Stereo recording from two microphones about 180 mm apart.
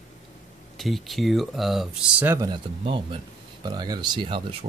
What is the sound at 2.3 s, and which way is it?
Speech, 25° right (ahead or behind).